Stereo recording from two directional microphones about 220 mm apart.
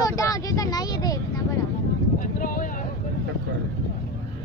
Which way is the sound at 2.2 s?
40° left (ahead or behind).